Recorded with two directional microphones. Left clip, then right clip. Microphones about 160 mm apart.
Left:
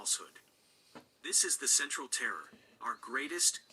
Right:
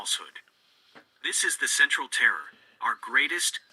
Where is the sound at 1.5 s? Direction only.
25° right (ahead or behind).